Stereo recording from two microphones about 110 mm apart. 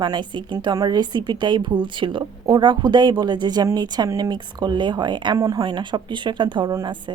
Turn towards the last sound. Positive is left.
turn(degrees=-45)  # may be behind; listen again after turning